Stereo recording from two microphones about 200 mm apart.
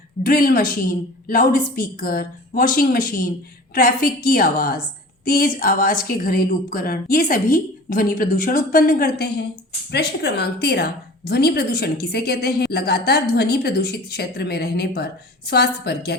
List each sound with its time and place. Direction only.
0.2 s a woman's voice: 45° left (ahead or behind)